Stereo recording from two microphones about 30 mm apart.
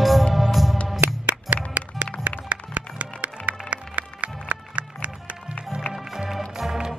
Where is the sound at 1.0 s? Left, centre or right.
Right.